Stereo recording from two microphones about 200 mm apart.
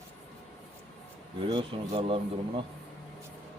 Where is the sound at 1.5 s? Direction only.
25° right (ahead or behind).